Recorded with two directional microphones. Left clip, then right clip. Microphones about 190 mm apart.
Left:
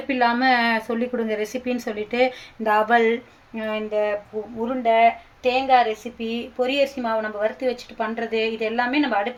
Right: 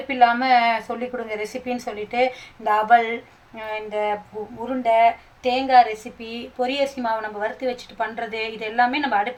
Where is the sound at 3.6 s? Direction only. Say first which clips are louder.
Left 2 dB; 30° left (ahead or behind).